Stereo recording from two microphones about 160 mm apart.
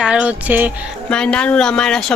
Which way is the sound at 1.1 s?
5° left (ahead or behind).